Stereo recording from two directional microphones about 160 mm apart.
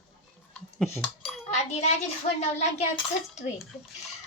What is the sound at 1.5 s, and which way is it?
Speech, 45° left (ahead or behind).